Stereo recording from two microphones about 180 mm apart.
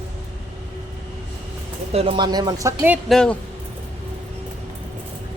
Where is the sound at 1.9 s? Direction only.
30° right (ahead or behind); by 3.0 s 15° right (ahead or behind).